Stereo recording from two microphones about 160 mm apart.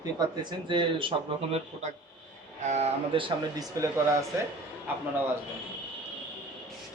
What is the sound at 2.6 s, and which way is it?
Speech, 45° right (ahead or behind).